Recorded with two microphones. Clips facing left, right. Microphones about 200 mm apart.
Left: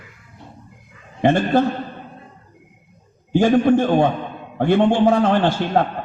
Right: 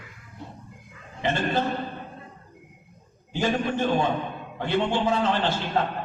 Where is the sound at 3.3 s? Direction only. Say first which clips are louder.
Left 11 dB; 50° left (ahead or behind).